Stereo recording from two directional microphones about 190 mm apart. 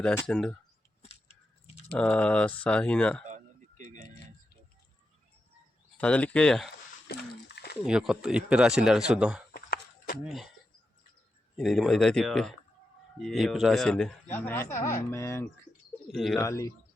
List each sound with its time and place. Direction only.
0.0 s a man's voice: 10° left (ahead or behind)
2.0 s a man's voice: 5° left (ahead or behind)
3.2 s a sound: 40° right (ahead or behind)
6.0 s speech: 5° left (ahead or behind)
7.1 s a sound: 60° left (ahead or behind)
7.9 s a man's voice: 5° right (ahead or behind)
9.5 s a sound: 50° left (ahead or behind)
10.2 s a man's voice: centre (ahead or behind)
11.5 s a man's voice: centre (ahead or behind)
16.0 s a man's voice: centre (ahead or behind)
16.4 s speech: 15° left (ahead or behind)